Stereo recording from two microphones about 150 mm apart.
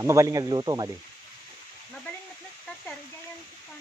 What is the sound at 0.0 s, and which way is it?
Speech, 20° right (ahead or behind).